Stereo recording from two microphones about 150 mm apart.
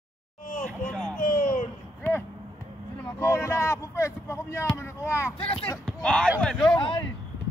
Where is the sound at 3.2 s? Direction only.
20° left (ahead or behind).